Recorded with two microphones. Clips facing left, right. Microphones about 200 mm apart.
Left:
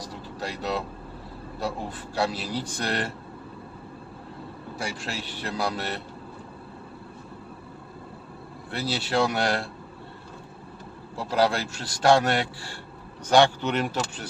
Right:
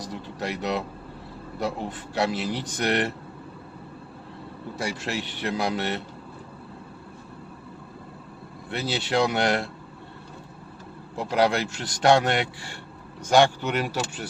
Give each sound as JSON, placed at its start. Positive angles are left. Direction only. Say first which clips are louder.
{"t": 0.3, "sound": "speech", "louder": "right 2 dB", "side_deg": -20}
{"t": 2.1, "sound": "a man's voice", "louder": "right 2 dB", "side_deg": -20}
{"t": 5.0, "sound": "a man's voice", "louder": "right 4 dB", "side_deg": -20}
{"t": 8.7, "sound": "a man's voice", "louder": "right 1 dB", "side_deg": -20}
{"t": 11.2, "sound": "a man's voice", "louder": "right 1 dB", "side_deg": -20}
{"t": 13.3, "sound": "speech", "louder": "even", "side_deg": -10}